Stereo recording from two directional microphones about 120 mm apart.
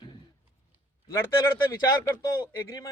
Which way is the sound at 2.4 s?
30° left (ahead or behind).